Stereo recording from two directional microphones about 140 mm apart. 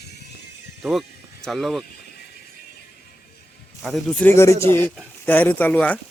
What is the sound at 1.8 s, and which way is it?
Vehicle, 90° left.